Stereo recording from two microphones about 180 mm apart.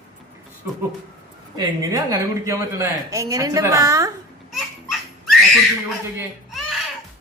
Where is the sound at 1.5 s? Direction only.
20° right (ahead or behind).